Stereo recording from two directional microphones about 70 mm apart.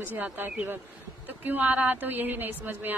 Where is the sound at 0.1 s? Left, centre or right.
Right.